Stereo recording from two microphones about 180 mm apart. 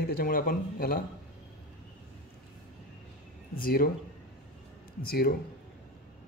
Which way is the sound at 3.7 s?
55° left (ahead or behind).